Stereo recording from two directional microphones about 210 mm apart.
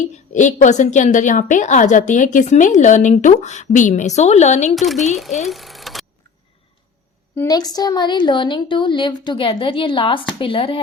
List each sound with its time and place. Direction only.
0.3 s a woman's voice: 35° left (ahead or behind)
4.7 s speech: centre (ahead or behind)
5.5 s a sound: centre (ahead or behind)
7.3 s a woman's voice: 15° left (ahead or behind)